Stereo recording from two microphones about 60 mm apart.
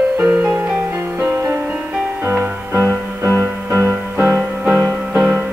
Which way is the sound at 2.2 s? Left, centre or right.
Right.